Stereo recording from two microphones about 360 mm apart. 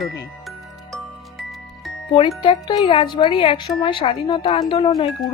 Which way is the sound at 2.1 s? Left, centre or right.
Centre.